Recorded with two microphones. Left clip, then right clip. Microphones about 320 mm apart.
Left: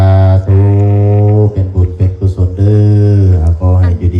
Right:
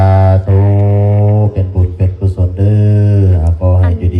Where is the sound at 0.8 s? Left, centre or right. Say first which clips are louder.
Left 1 dB; centre.